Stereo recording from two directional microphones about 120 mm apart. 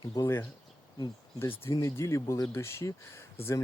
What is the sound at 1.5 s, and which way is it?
Speech, 25° left (ahead or behind).